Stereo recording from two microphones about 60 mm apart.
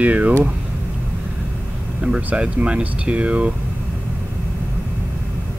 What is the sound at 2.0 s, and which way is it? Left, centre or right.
Speech, right.